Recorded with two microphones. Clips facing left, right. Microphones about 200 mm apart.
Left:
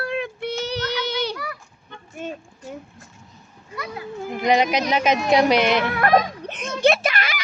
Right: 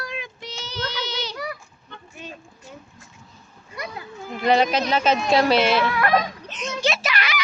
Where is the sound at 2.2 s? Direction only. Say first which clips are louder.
Left 8 dB; 50° left (ahead or behind).